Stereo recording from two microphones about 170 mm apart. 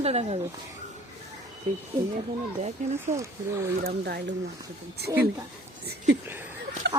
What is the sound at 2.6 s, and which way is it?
Speech, 40° right (ahead or behind).